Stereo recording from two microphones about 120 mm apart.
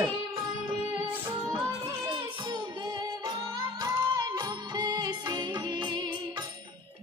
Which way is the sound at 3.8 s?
35° right (ahead or behind).